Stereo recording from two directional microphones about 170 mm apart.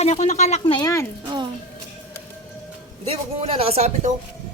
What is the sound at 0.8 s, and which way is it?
Speech, 20° left (ahead or behind).